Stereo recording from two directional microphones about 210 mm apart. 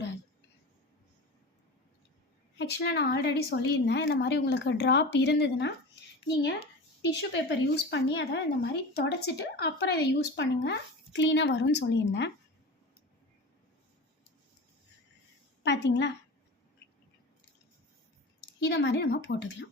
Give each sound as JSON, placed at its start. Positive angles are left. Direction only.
{"t": 2.6, "sound": "speech", "side_deg": 55}
{"t": 15.6, "sound": "speech", "side_deg": 55}
{"t": 18.6, "sound": "speech", "side_deg": 55}